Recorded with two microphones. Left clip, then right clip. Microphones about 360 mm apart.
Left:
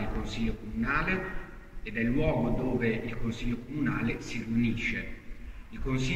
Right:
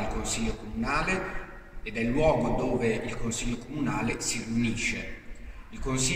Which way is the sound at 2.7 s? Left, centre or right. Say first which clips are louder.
Right 3 dB; right.